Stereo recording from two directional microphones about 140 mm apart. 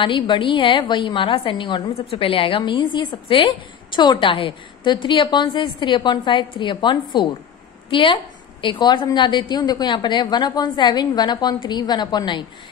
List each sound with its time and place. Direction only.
0.0 s a woman's voice: 35° left (ahead or behind)